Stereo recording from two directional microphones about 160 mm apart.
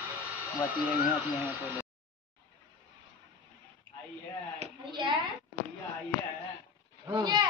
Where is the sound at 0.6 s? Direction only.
10° right (ahead or behind).